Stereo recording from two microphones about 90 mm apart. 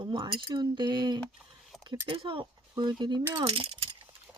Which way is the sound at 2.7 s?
50° right (ahead or behind).